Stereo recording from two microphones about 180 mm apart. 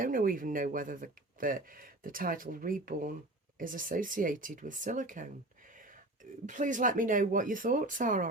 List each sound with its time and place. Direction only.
0.0 s speech: 50° right (ahead or behind)
6.4 s speech: 45° right (ahead or behind)